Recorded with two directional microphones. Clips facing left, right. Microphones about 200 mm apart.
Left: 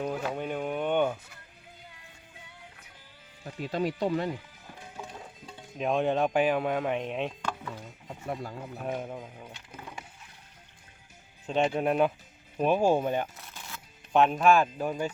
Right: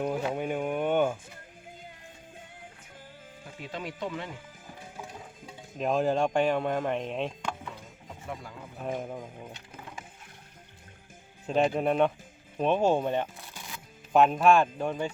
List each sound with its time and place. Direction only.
0.0 s a sound: 15° right (ahead or behind)
1.8 s music: 50° right (ahead or behind)
3.4 s speech: 40° left (ahead or behind)
5.5 s speech: 5° right (ahead or behind)
8.2 s speech: 45° left (ahead or behind)
8.8 s speech: 5° left (ahead or behind)
11.4 s speech: centre (ahead or behind)
13.5 s a sound: 15° right (ahead or behind)
14.1 s speech: centre (ahead or behind)